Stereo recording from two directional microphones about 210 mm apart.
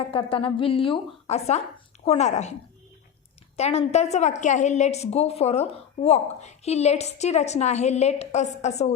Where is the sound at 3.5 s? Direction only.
30° left (ahead or behind).